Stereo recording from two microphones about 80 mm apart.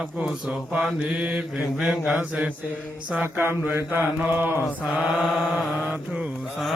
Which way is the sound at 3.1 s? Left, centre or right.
Right.